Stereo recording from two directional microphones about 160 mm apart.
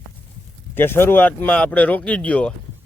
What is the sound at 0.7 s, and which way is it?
Speech, 15° left (ahead or behind).